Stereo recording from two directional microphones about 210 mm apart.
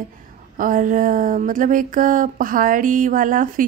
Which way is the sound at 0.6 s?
40° right (ahead or behind).